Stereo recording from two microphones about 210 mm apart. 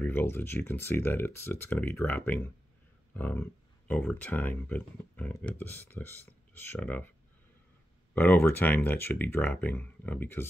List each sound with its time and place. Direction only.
0.0 s speech: 10° left (ahead or behind)
8.1 s speech: 10° left (ahead or behind)